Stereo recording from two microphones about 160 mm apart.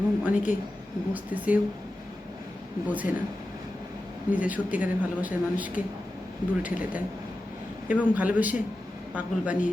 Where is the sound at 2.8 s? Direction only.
10° right (ahead or behind).